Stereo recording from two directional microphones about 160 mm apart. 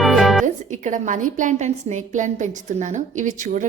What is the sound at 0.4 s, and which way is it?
A woman's voice, 50° right (ahead or behind).